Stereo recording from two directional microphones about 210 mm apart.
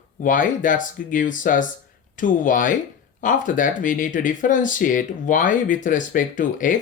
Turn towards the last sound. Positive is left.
turn(degrees=40)  # may be behind; listen again after turning